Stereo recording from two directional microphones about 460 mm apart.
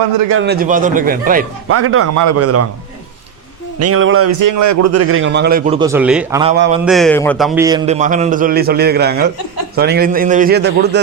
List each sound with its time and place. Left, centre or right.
0.3 s a man's voice: right
1.7 s a man's voice: right
3.8 s a man's voice: right
4.4 s a man's voice: right